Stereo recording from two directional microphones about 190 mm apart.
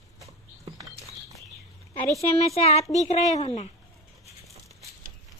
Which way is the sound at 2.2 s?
35° left (ahead or behind).